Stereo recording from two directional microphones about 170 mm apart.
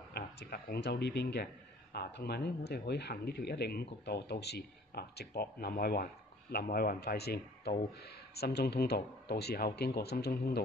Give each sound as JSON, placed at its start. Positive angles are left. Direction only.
{"t": 0.1, "sound": "a man's voice", "side_deg": 70}